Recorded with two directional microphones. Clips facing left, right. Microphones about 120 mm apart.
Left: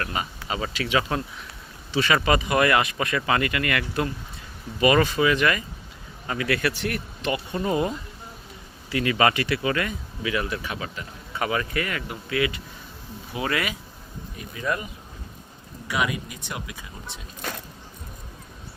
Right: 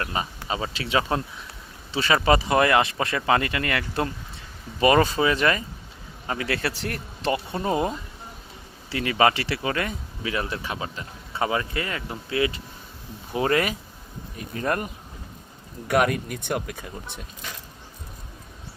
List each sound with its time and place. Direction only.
0.0 s speech: 25° right (ahead or behind); by 14.8 s 50° right (ahead or behind)
15.9 s speech: 55° right (ahead or behind)